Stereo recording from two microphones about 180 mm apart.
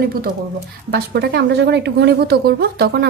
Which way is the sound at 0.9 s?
65° right (ahead or behind).